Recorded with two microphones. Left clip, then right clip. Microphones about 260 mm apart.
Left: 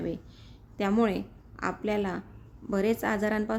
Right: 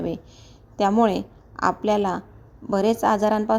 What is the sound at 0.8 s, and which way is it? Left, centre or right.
A woman's voice, centre.